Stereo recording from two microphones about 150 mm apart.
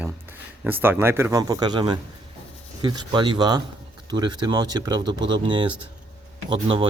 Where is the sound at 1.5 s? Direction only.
30° right (ahead or behind).